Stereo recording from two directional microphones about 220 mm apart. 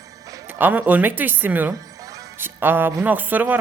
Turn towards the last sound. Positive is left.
turn(degrees=-10)  # may be behind; listen again after turning